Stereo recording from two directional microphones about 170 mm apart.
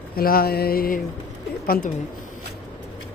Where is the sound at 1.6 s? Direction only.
55° left (ahead or behind).